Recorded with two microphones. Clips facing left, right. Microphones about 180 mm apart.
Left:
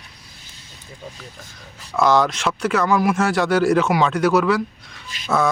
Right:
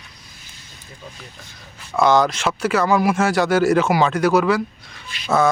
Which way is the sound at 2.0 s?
Centre (ahead or behind).